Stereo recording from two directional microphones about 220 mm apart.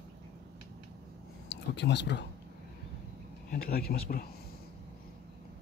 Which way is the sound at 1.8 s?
50° left (ahead or behind).